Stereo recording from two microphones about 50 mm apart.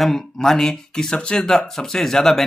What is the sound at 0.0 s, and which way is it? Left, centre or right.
Speech, centre.